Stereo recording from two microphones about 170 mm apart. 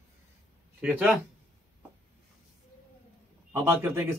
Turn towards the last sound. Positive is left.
turn(degrees=-15)  # may be behind; listen again after turning